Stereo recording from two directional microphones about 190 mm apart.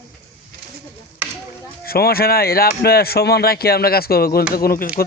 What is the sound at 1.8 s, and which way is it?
Speech, 50° left (ahead or behind).